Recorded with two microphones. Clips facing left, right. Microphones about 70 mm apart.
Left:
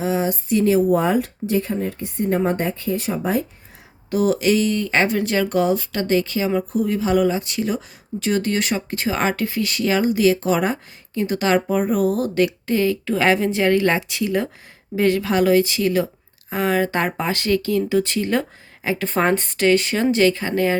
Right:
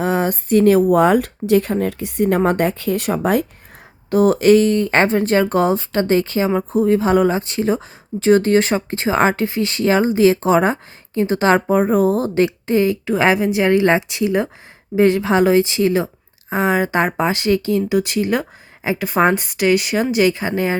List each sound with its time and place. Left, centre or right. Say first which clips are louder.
0.0 s speech: right 3 dB; right
4.1 s a woman's voice: right 6 dB; right; by 20.7 s centre